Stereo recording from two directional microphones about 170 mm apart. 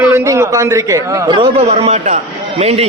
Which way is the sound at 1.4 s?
35° right (ahead or behind).